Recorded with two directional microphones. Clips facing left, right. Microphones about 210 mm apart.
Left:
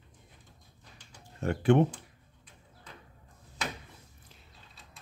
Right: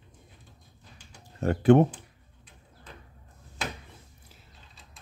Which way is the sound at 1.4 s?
40° right (ahead or behind).